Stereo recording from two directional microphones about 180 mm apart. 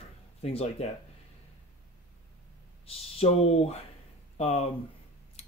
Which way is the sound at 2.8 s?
35° left (ahead or behind).